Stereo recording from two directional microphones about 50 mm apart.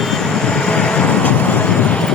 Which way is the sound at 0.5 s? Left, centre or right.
Centre.